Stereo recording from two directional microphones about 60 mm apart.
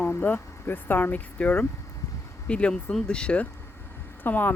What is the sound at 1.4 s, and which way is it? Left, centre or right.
Speech, centre.